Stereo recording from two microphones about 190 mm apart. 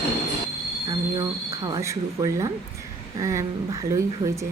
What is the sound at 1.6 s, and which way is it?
Speech, 20° right (ahead or behind).